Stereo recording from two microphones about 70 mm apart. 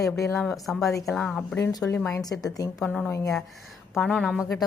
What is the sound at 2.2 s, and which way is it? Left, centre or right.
Speech, left.